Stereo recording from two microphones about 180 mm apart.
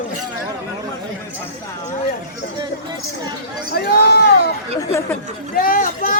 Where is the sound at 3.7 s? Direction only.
60° left (ahead or behind).